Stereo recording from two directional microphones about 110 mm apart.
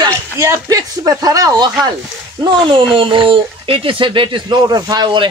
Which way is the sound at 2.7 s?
50° right (ahead or behind).